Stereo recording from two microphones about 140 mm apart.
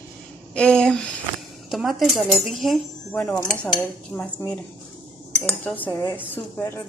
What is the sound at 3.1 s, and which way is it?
Cutlery, 10° left (ahead or behind).